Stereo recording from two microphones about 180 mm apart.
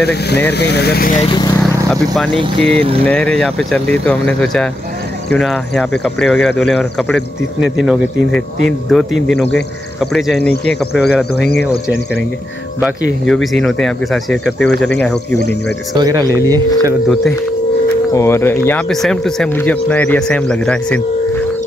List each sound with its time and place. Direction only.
0.0 s speech: 65° left (ahead or behind)
1.1 s speech: 30° left (ahead or behind)
2.3 s speech: 30° right (ahead or behind)
3.1 s speech: 5° left (ahead or behind)
13.3 s speech: centre (ahead or behind)
15.9 s speech: 20° right (ahead or behind)
18.1 s speech: 15° left (ahead or behind)
18.7 s speech: 5° left (ahead or behind)